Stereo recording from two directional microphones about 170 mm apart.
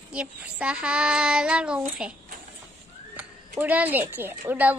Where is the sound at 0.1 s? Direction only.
5° right (ahead or behind).